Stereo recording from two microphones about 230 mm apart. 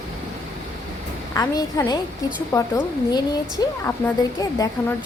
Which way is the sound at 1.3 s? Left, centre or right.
Centre.